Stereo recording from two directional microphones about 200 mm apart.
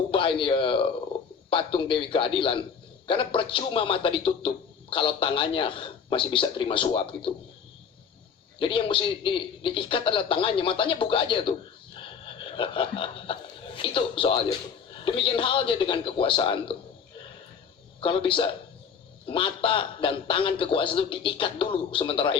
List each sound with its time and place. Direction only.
0.1 s a man's voice: 25° left (ahead or behind)
8.5 s speech: 25° left (ahead or behind)
11.9 s a sound: 25° left (ahead or behind)
13.7 s speech: 25° left (ahead or behind)
18.0 s speech: 25° left (ahead or behind)